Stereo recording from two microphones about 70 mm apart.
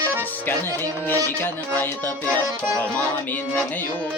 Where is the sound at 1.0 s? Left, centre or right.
Left.